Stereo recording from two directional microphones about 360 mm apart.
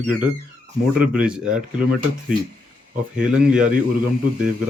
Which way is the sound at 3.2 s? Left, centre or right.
Centre.